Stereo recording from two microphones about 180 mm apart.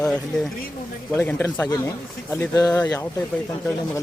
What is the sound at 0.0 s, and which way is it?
Speech, 5° left (ahead or behind).